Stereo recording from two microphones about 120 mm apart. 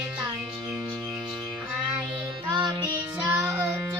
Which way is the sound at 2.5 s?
35° right (ahead or behind).